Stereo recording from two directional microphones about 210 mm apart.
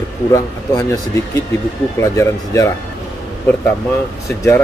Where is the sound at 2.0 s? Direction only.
15° left (ahead or behind).